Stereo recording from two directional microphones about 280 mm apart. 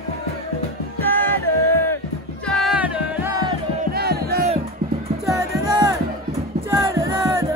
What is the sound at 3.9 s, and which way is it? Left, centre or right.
Crowd, right.